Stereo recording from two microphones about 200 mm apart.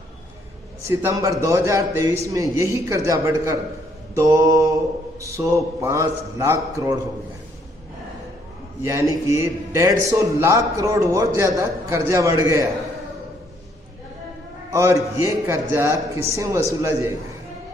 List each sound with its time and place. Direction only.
0.8 s a man's voice: 15° right (ahead or behind)
8.8 s a man's voice: 15° right (ahead or behind)
14.7 s a man's voice: 15° right (ahead or behind)